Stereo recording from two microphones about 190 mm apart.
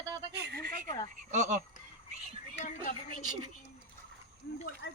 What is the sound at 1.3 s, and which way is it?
Speech, 40° right (ahead or behind).